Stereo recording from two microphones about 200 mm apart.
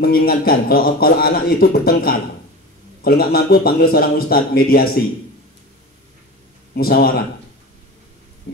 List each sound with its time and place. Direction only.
0.0 s a man's voice: 50° left (ahead or behind)
6.7 s a man's voice: 50° left (ahead or behind)